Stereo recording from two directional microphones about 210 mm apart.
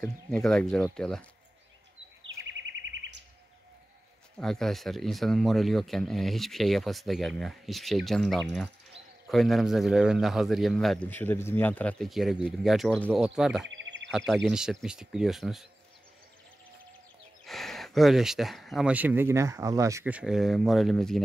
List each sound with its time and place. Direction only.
0.3 s a man's voice: 5° left (ahead or behind)
2.8 s chirp: 60° right (ahead or behind)
4.4 s a man's voice: centre (ahead or behind)
13.7 s a sound: 60° right (ahead or behind)
14.1 s a man's voice: centre (ahead or behind)
17.5 s a man's voice: centre (ahead or behind)